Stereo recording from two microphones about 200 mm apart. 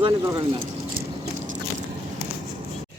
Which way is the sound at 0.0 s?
25° right (ahead or behind).